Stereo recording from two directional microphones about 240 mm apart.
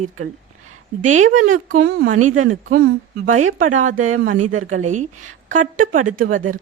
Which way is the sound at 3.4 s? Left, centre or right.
Right.